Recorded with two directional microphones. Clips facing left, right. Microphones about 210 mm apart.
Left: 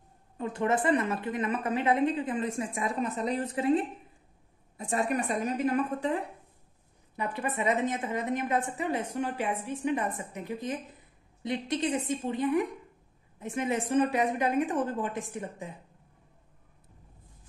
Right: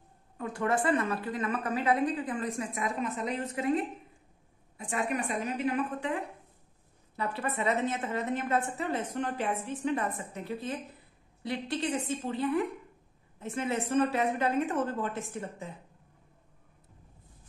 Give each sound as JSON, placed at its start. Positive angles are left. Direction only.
{"t": 0.4, "sound": "a woman's voice", "side_deg": 20}
{"t": 4.7, "sound": "a woman's voice", "side_deg": 40}
{"t": 7.2, "sound": "a woman's voice", "side_deg": 15}